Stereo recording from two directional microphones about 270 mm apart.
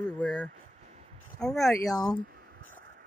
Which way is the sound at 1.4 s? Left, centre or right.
Centre.